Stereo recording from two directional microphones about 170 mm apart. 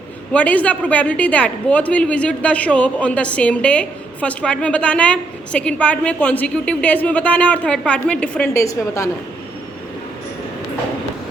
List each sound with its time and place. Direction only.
0.3 s a woman's voice: 10° left (ahead or behind)
8.5 s a woman's voice: 20° left (ahead or behind)